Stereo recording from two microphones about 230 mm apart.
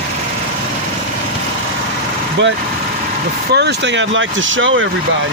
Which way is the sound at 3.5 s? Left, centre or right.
Right.